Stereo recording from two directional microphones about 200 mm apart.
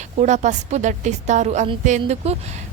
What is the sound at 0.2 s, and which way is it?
A woman's voice, 35° right (ahead or behind).